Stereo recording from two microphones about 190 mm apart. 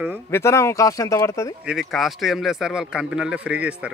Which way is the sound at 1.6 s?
Centre (ahead or behind).